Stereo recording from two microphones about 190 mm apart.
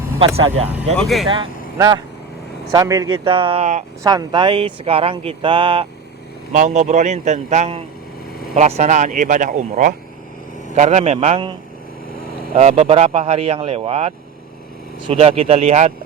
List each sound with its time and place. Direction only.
0.3 s speech: 30° right (ahead or behind)
0.9 s speech: centre (ahead or behind)
1.3 s speech: 25° right (ahead or behind)
4.0 s speech: 20° right (ahead or behind)
6.5 s speech: 40° right (ahead or behind)
12.5 s speech: 35° right (ahead or behind)